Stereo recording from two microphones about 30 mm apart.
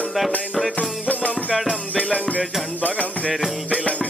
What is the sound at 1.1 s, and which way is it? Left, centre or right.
Music, left.